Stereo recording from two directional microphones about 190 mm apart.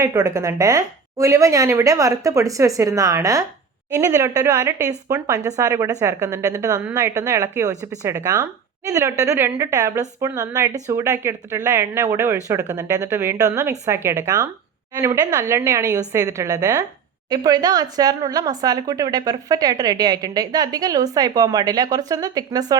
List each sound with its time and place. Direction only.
0.0 s speech: 15° right (ahead or behind)